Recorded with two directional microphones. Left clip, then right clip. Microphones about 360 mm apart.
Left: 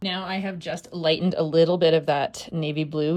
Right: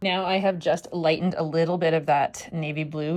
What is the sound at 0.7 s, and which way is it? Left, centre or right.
Speech, centre.